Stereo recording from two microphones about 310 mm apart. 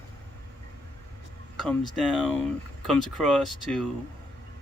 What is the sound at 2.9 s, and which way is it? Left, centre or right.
Speech, centre.